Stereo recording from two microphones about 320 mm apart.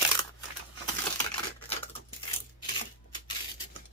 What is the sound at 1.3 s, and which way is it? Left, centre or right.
Typewriter, centre.